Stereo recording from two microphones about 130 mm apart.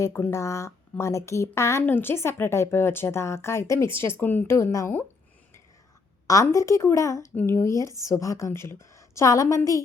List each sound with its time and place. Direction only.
0.0 s speech: 20° left (ahead or behind)
6.2 s speech: 25° left (ahead or behind)